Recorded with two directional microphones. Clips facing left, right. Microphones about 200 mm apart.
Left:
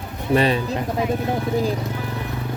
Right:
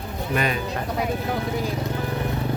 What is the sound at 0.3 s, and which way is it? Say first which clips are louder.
Speech: left 6 dB; 30° left (ahead or behind).